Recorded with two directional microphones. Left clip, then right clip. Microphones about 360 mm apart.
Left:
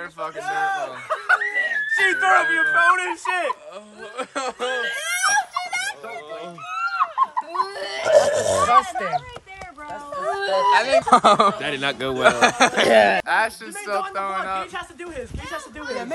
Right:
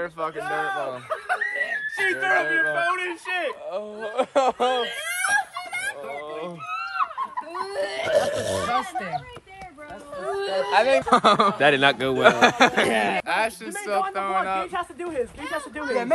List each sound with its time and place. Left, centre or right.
0.5 s speech: centre
1.0 s speech: centre
3.7 s speech: centre
4.8 s crying: centre
7.0 s a sound: centre
7.6 s speech: centre
8.1 s speech: centre
10.3 s speech: centre
14.7 s speech: centre